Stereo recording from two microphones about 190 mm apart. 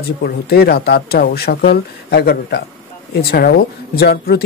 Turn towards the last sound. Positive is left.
turn(degrees=60)  # may be behind; listen again after turning